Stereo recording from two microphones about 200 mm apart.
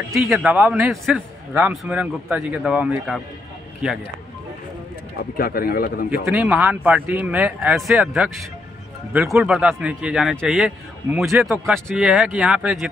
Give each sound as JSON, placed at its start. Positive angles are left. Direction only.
{"t": 0.1, "sound": "a man's voice", "side_deg": 0}
{"t": 5.4, "sound": "a man's voice", "side_deg": 50}
{"t": 6.2, "sound": "a man's voice", "side_deg": -5}